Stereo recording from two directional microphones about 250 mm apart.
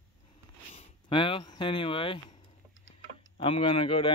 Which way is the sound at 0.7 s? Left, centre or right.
Left.